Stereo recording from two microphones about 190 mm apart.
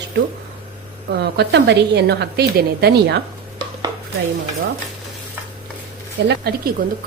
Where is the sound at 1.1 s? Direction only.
60° right (ahead or behind).